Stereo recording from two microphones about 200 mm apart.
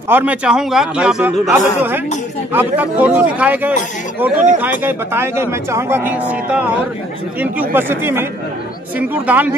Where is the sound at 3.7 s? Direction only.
40° left (ahead or behind).